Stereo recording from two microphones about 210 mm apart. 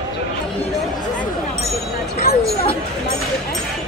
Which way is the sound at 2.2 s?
45° left (ahead or behind).